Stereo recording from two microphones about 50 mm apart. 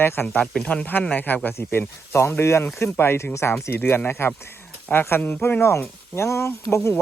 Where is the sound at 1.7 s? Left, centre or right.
Left.